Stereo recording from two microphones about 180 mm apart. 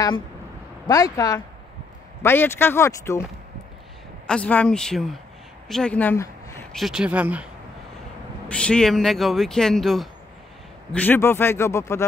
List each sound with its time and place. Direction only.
0.8 s speech: 20° left (ahead or behind)
4.3 s speech: 10° left (ahead or behind)
6.7 s speech: centre (ahead or behind)
8.5 s speech: 5° left (ahead or behind)